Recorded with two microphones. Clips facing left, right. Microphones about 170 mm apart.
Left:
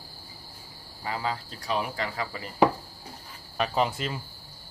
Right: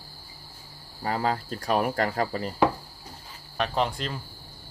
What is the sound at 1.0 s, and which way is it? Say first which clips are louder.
Speech: right 5 dB; 45° right (ahead or behind).